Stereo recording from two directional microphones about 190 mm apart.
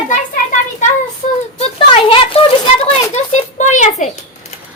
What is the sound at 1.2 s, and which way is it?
Speech, 40° left (ahead or behind).